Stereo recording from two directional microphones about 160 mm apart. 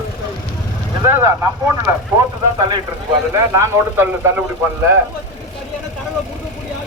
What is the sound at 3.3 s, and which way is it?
Speech, 15° right (ahead or behind).